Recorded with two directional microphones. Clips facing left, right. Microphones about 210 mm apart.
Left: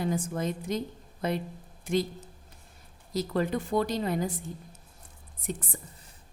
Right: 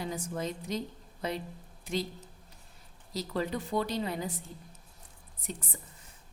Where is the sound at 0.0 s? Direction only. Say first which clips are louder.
Left 5 dB; 50° left (ahead or behind).